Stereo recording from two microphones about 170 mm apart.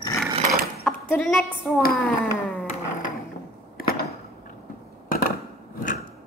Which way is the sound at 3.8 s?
60° left (ahead or behind).